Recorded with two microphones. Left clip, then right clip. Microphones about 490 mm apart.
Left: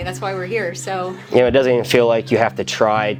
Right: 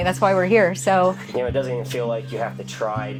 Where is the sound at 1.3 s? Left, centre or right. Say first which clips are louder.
Left 10 dB; left.